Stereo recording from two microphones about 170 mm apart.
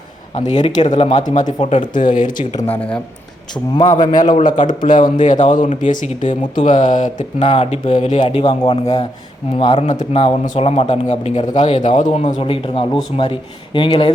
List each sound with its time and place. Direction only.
0.3 s speech: 45° left (ahead or behind)
2.7 s speech: 5° left (ahead or behind)
3.5 s speech: 25° left (ahead or behind)
4.4 s speech: 50° left (ahead or behind)
8.4 s speech: 25° left (ahead or behind)